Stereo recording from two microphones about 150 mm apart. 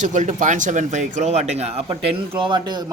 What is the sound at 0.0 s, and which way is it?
Speech, 55° right (ahead or behind).